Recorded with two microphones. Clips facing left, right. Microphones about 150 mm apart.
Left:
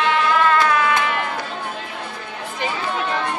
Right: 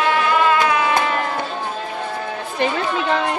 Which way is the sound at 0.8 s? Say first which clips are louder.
Right 1 dB; 35° right (ahead or behind).